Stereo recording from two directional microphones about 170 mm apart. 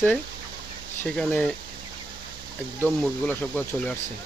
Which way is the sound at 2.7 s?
10° left (ahead or behind).